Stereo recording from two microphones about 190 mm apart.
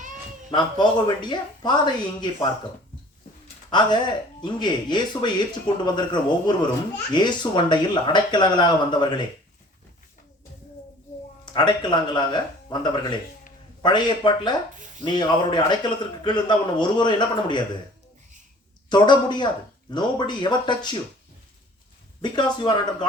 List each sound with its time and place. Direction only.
0.5 s a man's voice: 25° left (ahead or behind)
3.7 s a man's voice: 25° left (ahead or behind)
11.5 s a man's voice: 25° left (ahead or behind)
18.9 s a man's voice: 25° left (ahead or behind)
22.2 s a man's voice: 25° left (ahead or behind)